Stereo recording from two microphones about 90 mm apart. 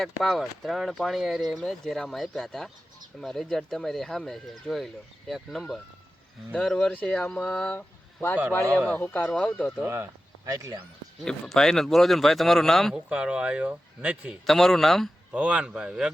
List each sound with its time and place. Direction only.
0.0 s speech: centre (ahead or behind)
7.8 s a sound: 25° left (ahead or behind)
8.9 s speech: 20° left (ahead or behind)
9.8 s speech: 30° right (ahead or behind)
11.3 s speech: 5° left (ahead or behind)
13.1 s speech: 10° right (ahead or behind)
14.4 s speech: 5° left (ahead or behind)
15.3 s speech: 10° right (ahead or behind)